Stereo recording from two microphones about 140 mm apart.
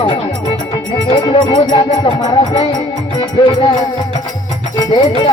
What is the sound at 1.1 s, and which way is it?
Music, 30° left (ahead or behind).